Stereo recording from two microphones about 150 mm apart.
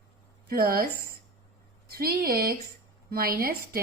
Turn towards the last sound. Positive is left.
turn(degrees=-80)